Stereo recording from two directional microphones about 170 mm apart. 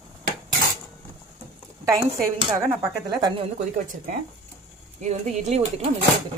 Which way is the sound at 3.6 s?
50° right (ahead or behind).